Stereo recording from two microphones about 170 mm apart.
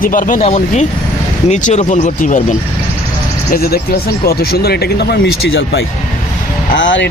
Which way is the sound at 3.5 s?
65° left (ahead or behind).